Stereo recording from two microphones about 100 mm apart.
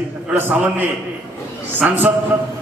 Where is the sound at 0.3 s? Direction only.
20° right (ahead or behind).